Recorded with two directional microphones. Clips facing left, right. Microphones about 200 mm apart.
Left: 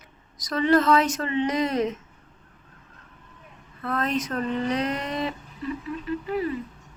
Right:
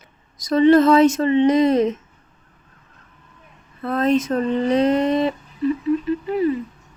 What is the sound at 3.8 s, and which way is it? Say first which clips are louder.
Speech: right 8 dB; 25° right (ahead or behind).